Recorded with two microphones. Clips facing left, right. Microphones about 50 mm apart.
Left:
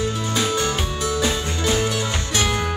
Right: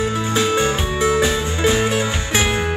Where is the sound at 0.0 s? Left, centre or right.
Right.